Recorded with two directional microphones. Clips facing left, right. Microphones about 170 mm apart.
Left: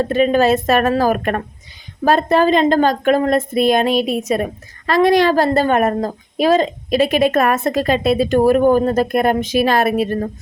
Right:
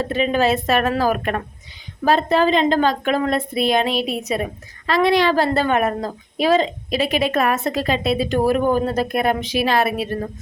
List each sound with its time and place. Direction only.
0.0 s a woman's voice: 45° left (ahead or behind)